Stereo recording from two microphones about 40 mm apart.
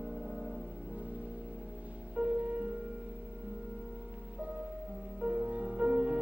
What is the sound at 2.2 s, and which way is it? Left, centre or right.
Music, right.